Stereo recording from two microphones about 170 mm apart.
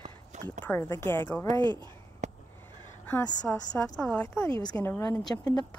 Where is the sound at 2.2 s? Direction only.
45° right (ahead or behind).